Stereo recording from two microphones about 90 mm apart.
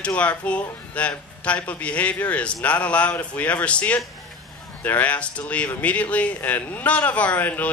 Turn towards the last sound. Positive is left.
turn(degrees=20)  # may be behind; listen again after turning